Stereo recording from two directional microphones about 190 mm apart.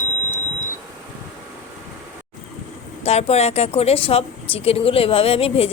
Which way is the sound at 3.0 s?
35° left (ahead or behind).